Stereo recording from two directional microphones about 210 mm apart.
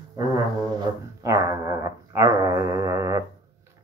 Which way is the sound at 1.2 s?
15° right (ahead or behind).